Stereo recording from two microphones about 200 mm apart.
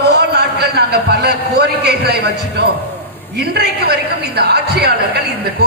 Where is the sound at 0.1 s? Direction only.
55° right (ahead or behind).